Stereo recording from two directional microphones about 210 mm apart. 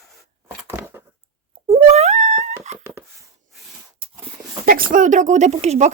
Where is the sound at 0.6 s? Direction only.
10° right (ahead or behind).